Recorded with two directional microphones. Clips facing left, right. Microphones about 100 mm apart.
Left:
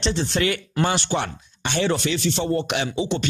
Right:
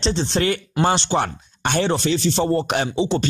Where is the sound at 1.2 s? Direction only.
50° right (ahead or behind).